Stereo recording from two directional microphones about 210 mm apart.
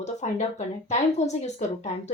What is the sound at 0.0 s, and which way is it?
A woman's voice, 35° left (ahead or behind).